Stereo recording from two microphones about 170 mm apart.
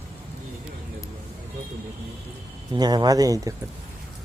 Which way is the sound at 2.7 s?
25° right (ahead or behind).